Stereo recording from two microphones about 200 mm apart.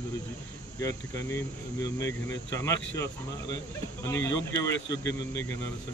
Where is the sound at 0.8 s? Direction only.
15° left (ahead or behind).